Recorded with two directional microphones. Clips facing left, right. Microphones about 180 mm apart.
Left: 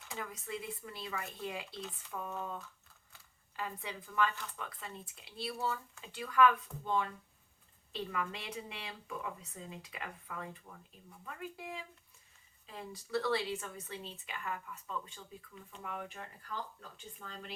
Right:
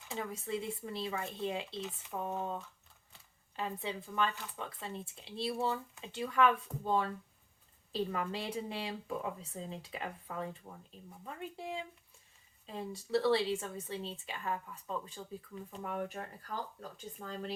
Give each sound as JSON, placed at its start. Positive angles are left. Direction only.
{"t": 0.1, "sound": "speech", "side_deg": -25}